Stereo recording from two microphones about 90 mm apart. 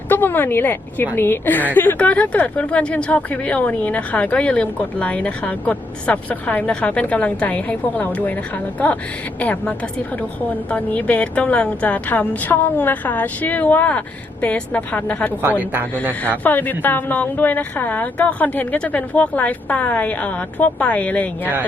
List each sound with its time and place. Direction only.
0.1 s a woman's voice: 20° left (ahead or behind)
15.4 s a woman's voice: 20° right (ahead or behind)
16.4 s a woman's voice: 20° left (ahead or behind)